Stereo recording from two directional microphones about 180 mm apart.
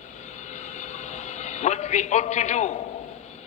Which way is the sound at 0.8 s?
40° left (ahead or behind).